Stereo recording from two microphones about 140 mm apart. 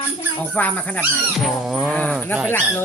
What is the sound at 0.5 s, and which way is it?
Speech, 10° left (ahead or behind).